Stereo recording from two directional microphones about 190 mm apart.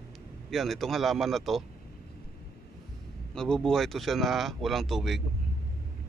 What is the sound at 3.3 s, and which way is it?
Speech, 5° left (ahead or behind).